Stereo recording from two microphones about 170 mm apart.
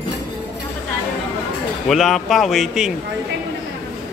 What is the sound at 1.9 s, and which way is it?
Speech, centre (ahead or behind).